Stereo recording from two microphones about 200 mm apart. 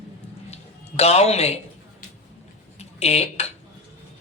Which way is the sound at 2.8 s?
30° left (ahead or behind).